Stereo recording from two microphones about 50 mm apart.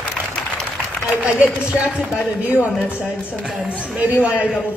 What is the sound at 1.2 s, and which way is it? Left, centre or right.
Speech, right.